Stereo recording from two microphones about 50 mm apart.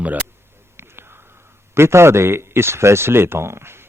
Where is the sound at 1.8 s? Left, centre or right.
Right.